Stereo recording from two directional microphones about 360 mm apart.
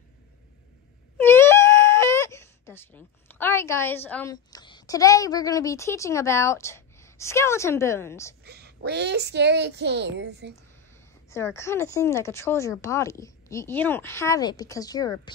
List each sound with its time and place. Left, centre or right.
1.1 s speech: centre
8.5 s speech: right
11.2 s speech: centre